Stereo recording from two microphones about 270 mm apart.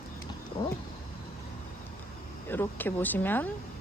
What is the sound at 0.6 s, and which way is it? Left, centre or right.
Roaring cats, centre.